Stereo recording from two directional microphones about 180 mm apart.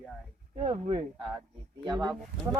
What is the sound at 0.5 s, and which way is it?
Speech, 40° right (ahead or behind).